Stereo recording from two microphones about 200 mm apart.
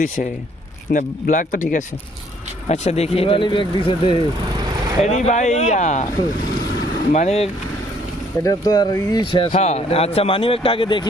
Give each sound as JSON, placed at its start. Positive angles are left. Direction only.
{"t": 0.9, "sound": "speech", "side_deg": 40}
{"t": 5.0, "sound": "speech", "side_deg": 35}
{"t": 7.1, "sound": "speech", "side_deg": 35}
{"t": 8.4, "sound": "speech", "side_deg": 20}